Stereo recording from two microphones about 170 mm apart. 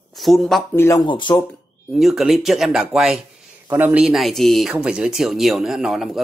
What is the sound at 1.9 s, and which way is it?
Speech, centre (ahead or behind).